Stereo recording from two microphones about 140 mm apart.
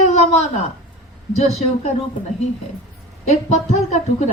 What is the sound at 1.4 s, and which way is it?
Speech, 50° left (ahead or behind).